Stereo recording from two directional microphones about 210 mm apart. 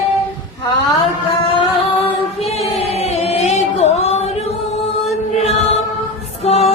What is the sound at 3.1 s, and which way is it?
Music, 30° left (ahead or behind).